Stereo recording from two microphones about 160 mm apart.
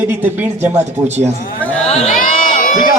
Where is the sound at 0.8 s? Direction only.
45° right (ahead or behind).